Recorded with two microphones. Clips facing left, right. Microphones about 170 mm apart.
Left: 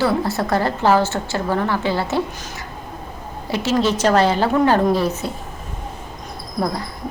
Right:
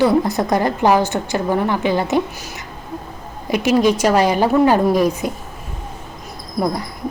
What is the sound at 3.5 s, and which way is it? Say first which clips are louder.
Speech: right 4 dB; 15° right (ahead or behind).